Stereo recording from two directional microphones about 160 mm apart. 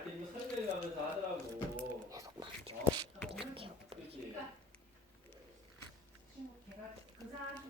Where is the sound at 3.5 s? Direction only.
35° right (ahead or behind).